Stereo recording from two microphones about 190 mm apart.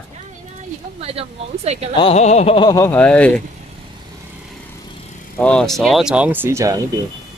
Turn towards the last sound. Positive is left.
turn(degrees=-15)  # may be behind; listen again after turning